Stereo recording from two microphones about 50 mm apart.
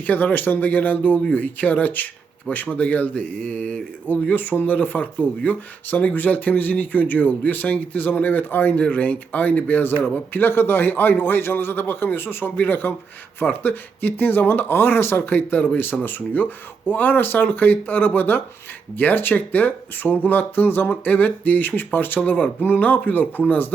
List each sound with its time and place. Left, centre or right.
0.1 s a man's voice: left
20.9 s speech: left